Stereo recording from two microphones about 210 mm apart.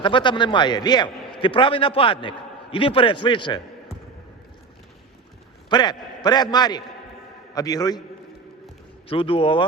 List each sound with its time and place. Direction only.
0.0 s a man's voice: 25° left (ahead or behind)
5.6 s a man's voice: 20° left (ahead or behind)
9.0 s a man's voice: 25° left (ahead or behind)